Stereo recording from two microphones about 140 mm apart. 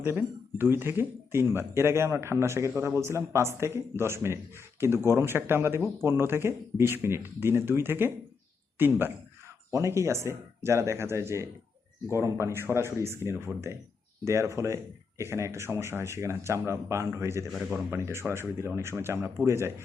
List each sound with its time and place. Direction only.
0.0 s speech: 15° right (ahead or behind)
17.5 s speech: 5° right (ahead or behind)
17.9 s speech: 20° right (ahead or behind)